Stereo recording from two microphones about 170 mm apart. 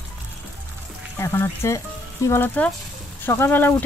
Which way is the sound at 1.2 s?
15° left (ahead or behind).